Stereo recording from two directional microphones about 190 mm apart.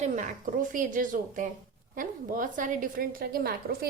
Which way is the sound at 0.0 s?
40° right (ahead or behind).